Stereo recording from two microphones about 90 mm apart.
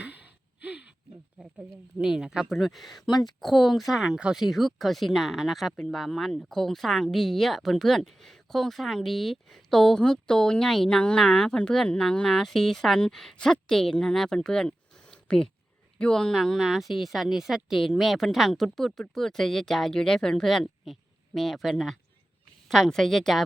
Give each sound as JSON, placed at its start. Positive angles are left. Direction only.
{"t": 0.6, "sound": "a sound", "side_deg": -15}
{"t": 2.0, "sound": "speech", "side_deg": -5}
{"t": 3.1, "sound": "speech", "side_deg": 50}
{"t": 3.4, "sound": "speech", "side_deg": 0}